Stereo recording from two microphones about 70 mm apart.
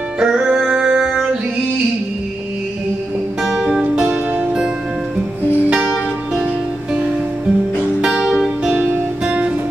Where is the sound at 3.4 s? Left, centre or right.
Centre.